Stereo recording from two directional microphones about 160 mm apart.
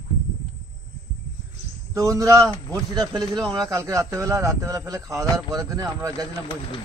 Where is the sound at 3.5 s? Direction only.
25° right (ahead or behind).